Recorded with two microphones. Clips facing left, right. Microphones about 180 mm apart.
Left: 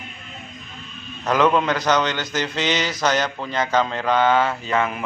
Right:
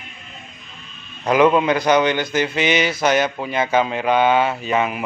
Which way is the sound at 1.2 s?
10° right (ahead or behind).